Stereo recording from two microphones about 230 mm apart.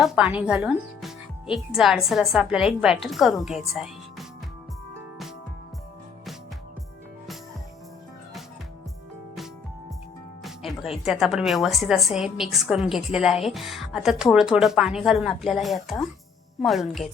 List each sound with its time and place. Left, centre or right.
0.0 s speech: centre
10.4 s speech: centre